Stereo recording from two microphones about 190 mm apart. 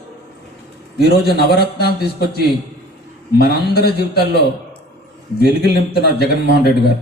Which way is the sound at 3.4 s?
55° left (ahead or behind).